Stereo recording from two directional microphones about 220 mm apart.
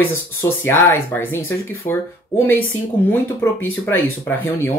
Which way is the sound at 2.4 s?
10° left (ahead or behind).